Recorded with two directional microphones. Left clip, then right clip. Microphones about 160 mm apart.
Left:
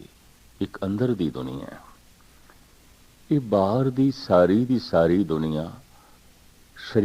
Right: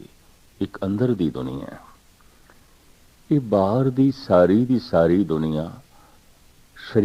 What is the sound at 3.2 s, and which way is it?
Speech, 30° left (ahead or behind).